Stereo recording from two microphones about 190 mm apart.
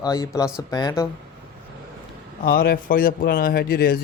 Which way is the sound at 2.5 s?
50° left (ahead or behind).